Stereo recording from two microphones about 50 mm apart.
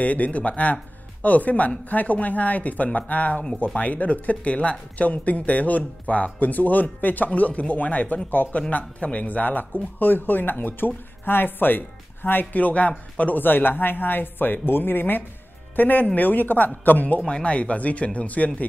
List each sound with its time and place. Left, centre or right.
0.0 s speech: left
12.5 s speech: left
17.3 s speech: left